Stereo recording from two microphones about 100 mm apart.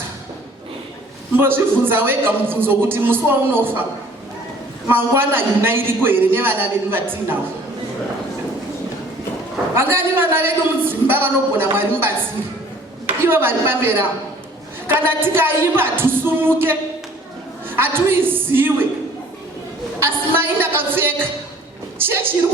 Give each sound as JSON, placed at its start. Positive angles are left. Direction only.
{"t": 1.4, "sound": "a man's voice", "side_deg": -20}
{"t": 4.9, "sound": "a man's voice", "side_deg": -20}
{"t": 9.7, "sound": "a man's voice", "side_deg": -20}
{"t": 13.2, "sound": "a man's voice", "side_deg": -20}
{"t": 20.0, "sound": "a man's voice", "side_deg": -20}